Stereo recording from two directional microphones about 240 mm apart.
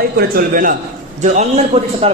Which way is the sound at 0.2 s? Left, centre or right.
Right.